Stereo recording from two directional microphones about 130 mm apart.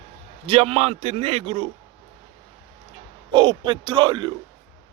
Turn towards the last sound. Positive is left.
turn(degrees=-35)  # may be behind; listen again after turning